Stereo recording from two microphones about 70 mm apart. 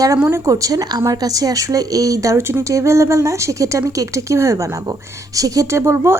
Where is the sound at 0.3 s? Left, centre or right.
Right.